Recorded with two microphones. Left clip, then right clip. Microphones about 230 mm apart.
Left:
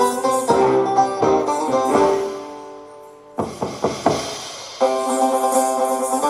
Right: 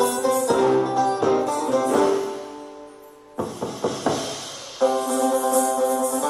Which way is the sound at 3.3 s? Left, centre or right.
Left.